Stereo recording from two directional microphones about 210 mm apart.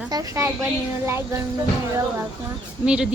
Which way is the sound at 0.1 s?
15° right (ahead or behind).